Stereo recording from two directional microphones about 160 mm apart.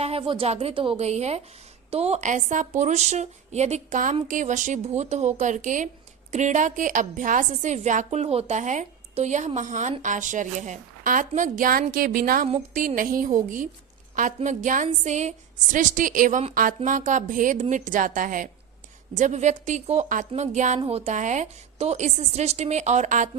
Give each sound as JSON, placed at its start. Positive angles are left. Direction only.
{"t": 0.0, "sound": "a woman's voice", "side_deg": -35}